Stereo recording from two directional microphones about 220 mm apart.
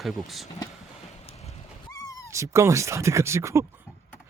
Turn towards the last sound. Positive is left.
turn(degrees=-10)  # may be behind; listen again after turning